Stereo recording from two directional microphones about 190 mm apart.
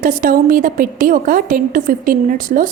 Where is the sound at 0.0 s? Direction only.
45° right (ahead or behind).